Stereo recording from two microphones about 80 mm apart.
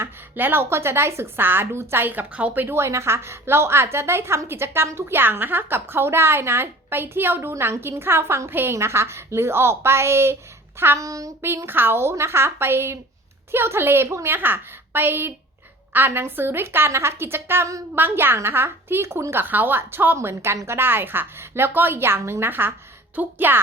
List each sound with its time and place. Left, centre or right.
0.0 s a woman's voice: right
2.6 s a woman's voice: right
11.0 s speech: right
11.4 s a woman's voice: right